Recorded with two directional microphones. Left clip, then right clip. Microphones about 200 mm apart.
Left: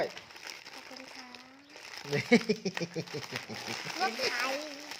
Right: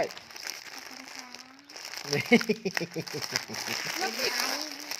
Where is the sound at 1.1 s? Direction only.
40° right (ahead or behind).